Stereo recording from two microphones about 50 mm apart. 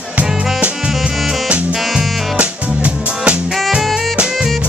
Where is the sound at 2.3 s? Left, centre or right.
Right.